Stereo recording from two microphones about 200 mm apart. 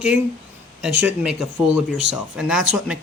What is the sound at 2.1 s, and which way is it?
Speech, 5° right (ahead or behind).